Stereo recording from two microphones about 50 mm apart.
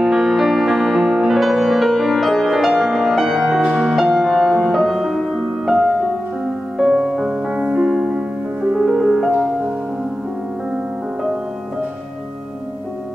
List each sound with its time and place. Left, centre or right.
0.0 s music: centre
6.8 s music: centre
8.8 s music: centre